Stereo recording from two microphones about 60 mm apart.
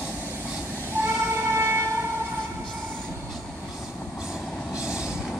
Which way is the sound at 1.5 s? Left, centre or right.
Right.